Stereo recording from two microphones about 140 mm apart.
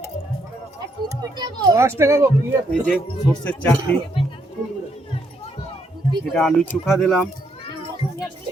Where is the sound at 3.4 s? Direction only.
10° left (ahead or behind).